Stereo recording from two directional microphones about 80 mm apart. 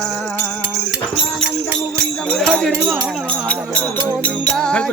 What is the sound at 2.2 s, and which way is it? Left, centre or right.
Music, centre.